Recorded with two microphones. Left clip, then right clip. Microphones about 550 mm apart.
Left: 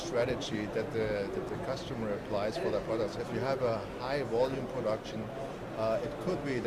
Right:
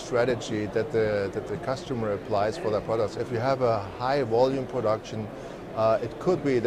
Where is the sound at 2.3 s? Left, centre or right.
Right.